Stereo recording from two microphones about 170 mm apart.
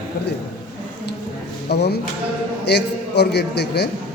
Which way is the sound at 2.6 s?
80° left.